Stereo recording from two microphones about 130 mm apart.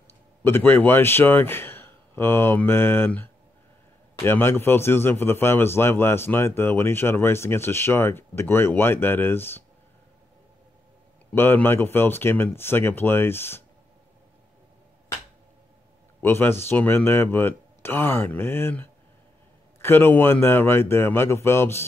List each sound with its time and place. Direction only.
0.4 s a man's voice: 15° left (ahead or behind)
11.3 s a man's voice: 15° left (ahead or behind)
16.2 s a man's voice: 20° left (ahead or behind)